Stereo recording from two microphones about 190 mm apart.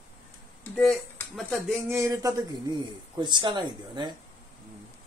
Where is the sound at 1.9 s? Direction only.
15° right (ahead or behind).